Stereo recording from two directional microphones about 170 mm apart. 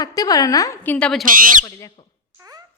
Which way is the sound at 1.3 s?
55° right (ahead or behind).